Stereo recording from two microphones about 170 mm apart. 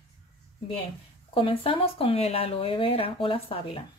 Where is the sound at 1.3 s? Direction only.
30° left (ahead or behind).